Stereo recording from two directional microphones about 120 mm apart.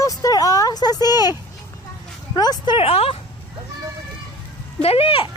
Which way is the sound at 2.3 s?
35° left (ahead or behind).